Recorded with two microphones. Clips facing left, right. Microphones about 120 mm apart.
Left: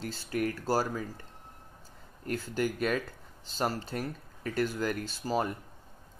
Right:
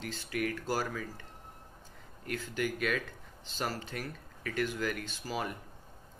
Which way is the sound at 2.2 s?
35° left (ahead or behind).